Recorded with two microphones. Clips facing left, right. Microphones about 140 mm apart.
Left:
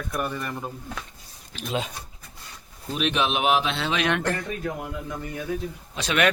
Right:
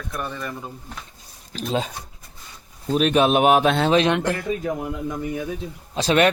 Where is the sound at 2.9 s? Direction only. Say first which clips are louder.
Right 7 dB; 45° right (ahead or behind).